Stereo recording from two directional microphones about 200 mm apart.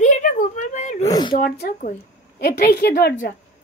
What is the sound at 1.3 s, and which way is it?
A woman's voice, 45° left (ahead or behind).